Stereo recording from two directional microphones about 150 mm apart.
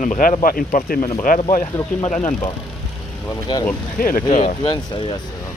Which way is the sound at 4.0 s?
85° left.